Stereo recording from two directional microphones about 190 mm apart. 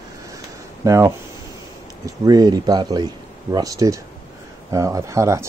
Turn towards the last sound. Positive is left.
turn(degrees=-15)  # may be behind; listen again after turning